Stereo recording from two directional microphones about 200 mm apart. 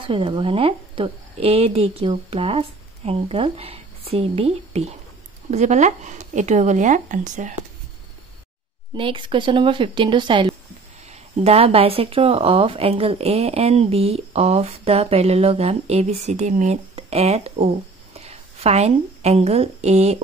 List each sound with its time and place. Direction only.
0.0 s speech: 25° right (ahead or behind)
8.9 s speech: 25° right (ahead or behind)